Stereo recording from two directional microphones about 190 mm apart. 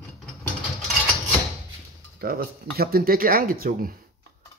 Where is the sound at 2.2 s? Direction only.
55° right (ahead or behind).